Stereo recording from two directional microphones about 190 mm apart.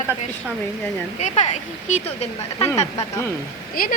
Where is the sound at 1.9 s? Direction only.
40° left (ahead or behind).